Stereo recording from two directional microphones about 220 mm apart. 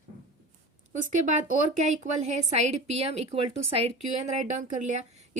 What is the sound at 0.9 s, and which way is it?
A woman's voice, 35° right (ahead or behind).